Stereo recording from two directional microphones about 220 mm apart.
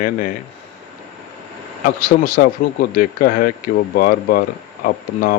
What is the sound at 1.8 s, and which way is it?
Speech, 35° left (ahead or behind).